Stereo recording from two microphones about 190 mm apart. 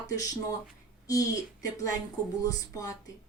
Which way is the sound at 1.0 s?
20° left (ahead or behind).